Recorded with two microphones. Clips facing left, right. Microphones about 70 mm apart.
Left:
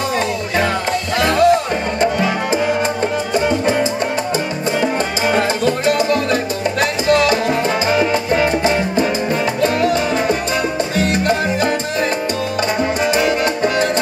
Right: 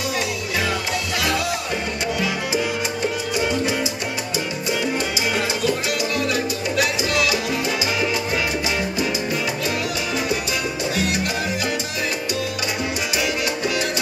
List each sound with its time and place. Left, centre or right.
1.2 s music: left
5.3 s music: left
13.1 s music: left